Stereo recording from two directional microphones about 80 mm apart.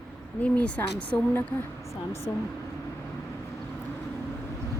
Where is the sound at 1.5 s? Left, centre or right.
Left.